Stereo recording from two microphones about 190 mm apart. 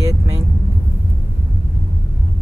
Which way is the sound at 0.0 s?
15° right (ahead or behind).